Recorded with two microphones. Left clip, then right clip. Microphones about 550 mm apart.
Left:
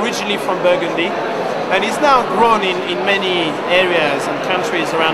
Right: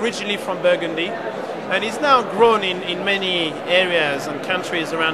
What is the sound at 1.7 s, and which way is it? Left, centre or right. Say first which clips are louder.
Speech: left 3 dB; right.